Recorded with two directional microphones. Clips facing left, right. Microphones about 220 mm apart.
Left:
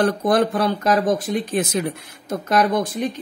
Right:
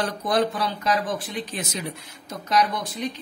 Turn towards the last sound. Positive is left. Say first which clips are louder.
# left 8 dB
turn(degrees=50)  # may be behind; listen again after turning